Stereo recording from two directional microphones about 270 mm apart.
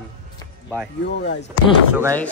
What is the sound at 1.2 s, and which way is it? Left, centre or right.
Speech, left.